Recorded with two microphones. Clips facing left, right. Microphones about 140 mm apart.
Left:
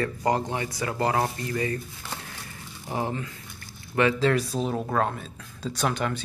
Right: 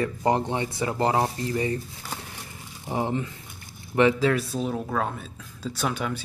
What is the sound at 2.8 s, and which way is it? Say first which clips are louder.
Speech: right 3 dB; 20° right (ahead or behind).